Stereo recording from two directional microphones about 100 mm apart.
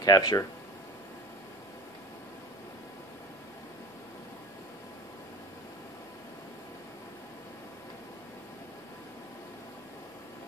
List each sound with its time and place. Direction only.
0.0 s speech: 40° left (ahead or behind)